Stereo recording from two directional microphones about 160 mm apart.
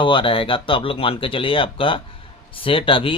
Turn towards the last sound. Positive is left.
turn(degrees=35)  # may be behind; listen again after turning